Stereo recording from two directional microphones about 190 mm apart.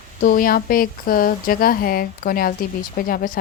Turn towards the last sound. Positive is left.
turn(degrees=50)  # may be behind; listen again after turning